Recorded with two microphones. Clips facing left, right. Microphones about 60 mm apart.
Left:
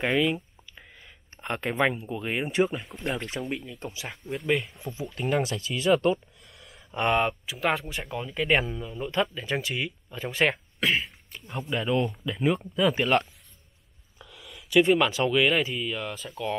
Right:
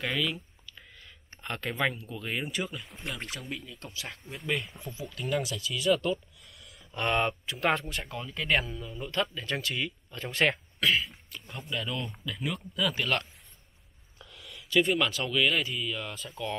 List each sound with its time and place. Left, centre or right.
0.0 s a sound: left
1.4 s speech: left
2.5 s speech: left
3.3 s speech: left
4.7 s speech: right
5.1 s speech: left
5.7 s speech: left
6.6 s a sound: centre
7.2 s speech: centre
7.9 s speech: centre
11.7 s speech: left
14.2 s a sound: centre
14.8 s speech: centre